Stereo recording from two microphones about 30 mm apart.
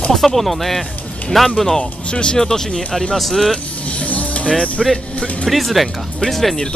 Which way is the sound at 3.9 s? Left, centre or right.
Left.